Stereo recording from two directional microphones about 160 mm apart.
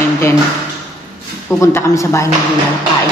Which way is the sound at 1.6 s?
20° left (ahead or behind).